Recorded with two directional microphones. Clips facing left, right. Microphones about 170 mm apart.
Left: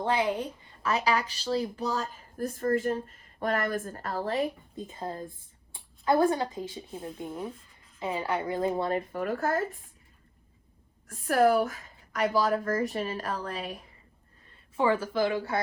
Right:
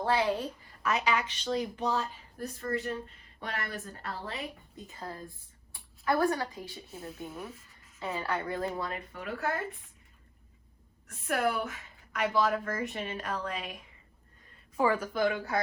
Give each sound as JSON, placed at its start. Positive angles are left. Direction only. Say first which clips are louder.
{"t": 0.0, "sound": "a woman's voice", "louder": "left 1 dB", "side_deg": 20}
{"t": 4.8, "sound": "a woman's voice", "louder": "left 6 dB", "side_deg": 25}
{"t": 8.9, "sound": "a woman's voice", "louder": "left 9 dB", "side_deg": 40}
{"t": 11.1, "sound": "a woman's voice", "louder": "left 7 dB", "side_deg": 40}